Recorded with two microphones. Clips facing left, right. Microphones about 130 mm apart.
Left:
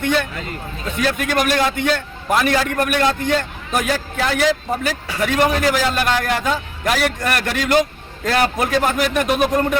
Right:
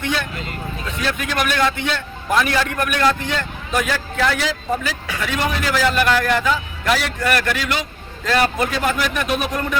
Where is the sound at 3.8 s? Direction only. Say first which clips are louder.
Even; 45° left (ahead or behind).